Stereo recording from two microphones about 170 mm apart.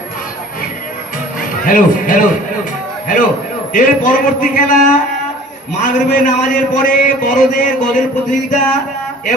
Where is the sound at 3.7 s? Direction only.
50° left (ahead or behind).